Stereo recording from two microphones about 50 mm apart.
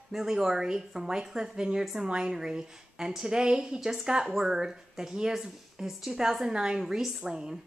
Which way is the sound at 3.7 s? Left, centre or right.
Centre.